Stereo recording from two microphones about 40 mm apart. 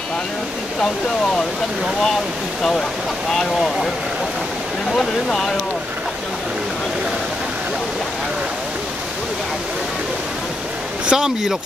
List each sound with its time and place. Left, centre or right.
3.3 s speech: centre
4.9 s speech: centre
11.1 s speech: centre